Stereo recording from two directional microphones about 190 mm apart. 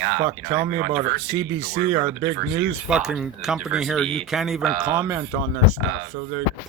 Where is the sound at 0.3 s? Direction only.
15° right (ahead or behind).